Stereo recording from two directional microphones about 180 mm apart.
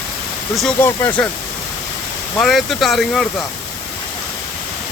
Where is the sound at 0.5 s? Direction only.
5° left (ahead or behind).